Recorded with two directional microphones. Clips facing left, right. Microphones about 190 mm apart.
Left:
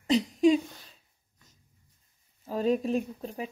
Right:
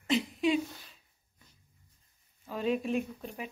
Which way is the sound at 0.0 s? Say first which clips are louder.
Left 6 dB; 40° left (ahead or behind).